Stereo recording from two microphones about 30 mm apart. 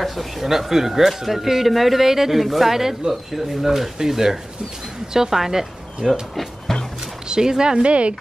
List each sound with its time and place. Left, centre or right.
0.0 s speech: centre
6.7 s music: centre
7.2 s speech: right
7.8 s speech: right